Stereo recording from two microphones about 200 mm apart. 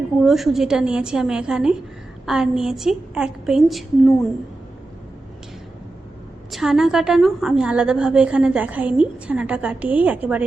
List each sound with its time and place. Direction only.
0.2 s a woman's voice: centre (ahead or behind)
6.5 s a woman's voice: centre (ahead or behind)